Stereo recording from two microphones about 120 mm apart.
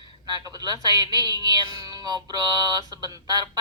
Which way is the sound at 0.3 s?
35° right (ahead or behind).